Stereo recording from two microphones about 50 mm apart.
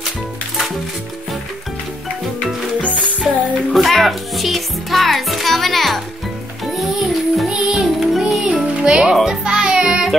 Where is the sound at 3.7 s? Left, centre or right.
Centre.